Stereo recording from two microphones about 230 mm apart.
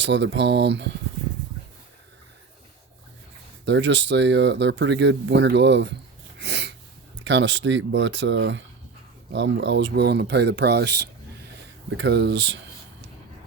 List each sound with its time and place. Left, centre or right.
0.0 s speech: right
3.7 s speech: right
6.4 s sneeze: right
7.3 s speech: right